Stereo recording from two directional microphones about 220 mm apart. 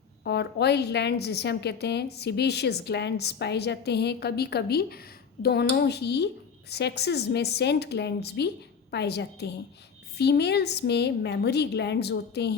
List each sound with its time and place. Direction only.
0.3 s a woman's voice: 50° left (ahead or behind)